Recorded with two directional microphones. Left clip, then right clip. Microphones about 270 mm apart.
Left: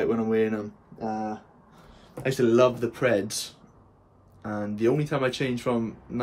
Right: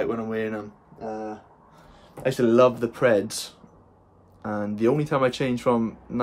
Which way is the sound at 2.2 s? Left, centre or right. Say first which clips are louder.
Right 2 dB; centre.